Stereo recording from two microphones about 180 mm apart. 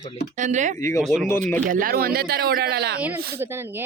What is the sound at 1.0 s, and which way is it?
Speech, 5° right (ahead or behind).